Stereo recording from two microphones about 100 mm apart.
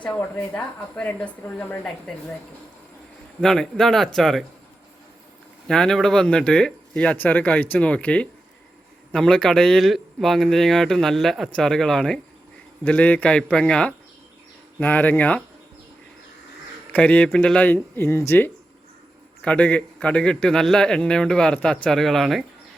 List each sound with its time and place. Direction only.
0.2 s a man's voice: 15° left (ahead or behind)
3.4 s speech: 5° left (ahead or behind)
5.6 s a man's voice: 5° left (ahead or behind)
16.9 s a man's voice: 15° left (ahead or behind)
19.4 s a man's voice: 10° left (ahead or behind)